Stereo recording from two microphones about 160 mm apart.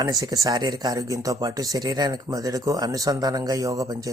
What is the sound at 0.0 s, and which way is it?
Speech, 20° right (ahead or behind).